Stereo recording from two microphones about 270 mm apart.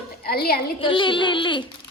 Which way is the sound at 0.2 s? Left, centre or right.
Left.